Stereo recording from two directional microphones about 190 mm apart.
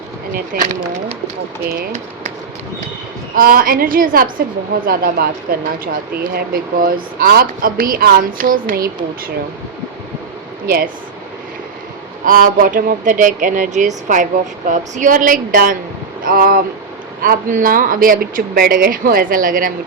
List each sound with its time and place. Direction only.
0.3 s a woman's voice: 45° right (ahead or behind)
3.3 s a woman's voice: 50° right (ahead or behind)
12.2 s a woman's voice: 45° right (ahead or behind)